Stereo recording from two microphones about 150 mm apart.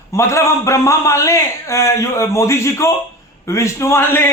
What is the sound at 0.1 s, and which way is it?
A man's voice, 20° left (ahead or behind).